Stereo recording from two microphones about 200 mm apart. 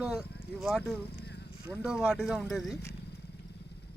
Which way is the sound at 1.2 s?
55° left (ahead or behind).